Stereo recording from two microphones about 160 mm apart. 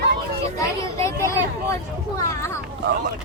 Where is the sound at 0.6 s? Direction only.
15° left (ahead or behind).